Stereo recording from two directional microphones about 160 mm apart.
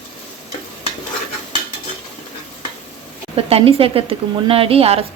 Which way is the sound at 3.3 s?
35° right (ahead or behind).